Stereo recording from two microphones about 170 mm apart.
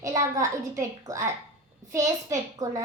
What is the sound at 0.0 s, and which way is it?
A child's voice, 20° right (ahead or behind).